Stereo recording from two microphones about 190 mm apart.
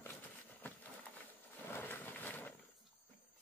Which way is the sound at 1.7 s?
10° left (ahead or behind).